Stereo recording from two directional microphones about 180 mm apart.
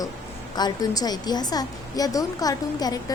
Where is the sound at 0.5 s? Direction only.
20° left (ahead or behind).